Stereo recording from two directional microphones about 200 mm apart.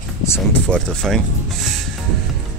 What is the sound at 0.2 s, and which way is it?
Speech, 10° left (ahead or behind).